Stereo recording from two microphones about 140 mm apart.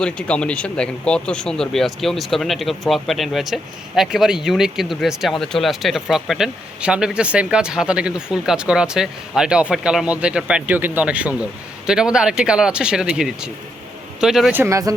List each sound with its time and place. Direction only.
0.0 s speech: 5° left (ahead or behind)
14.5 s speech: 20° right (ahead or behind)